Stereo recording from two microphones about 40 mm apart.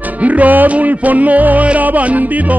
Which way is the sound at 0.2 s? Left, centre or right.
Right.